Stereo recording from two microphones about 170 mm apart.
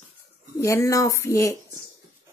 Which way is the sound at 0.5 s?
15° left (ahead or behind).